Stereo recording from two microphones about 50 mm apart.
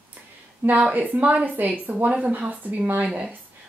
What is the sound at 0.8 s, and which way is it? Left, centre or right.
A woman's voice, right.